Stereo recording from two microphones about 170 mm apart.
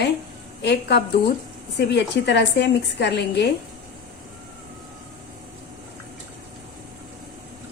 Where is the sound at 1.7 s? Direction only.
90° left.